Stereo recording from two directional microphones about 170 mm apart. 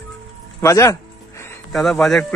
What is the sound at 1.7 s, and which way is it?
Speech, centre (ahead or behind).